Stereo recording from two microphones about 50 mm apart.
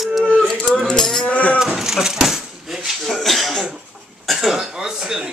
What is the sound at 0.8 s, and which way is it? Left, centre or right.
Rattle, centre.